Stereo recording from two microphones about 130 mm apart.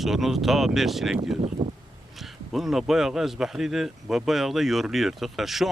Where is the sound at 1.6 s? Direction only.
25° right (ahead or behind).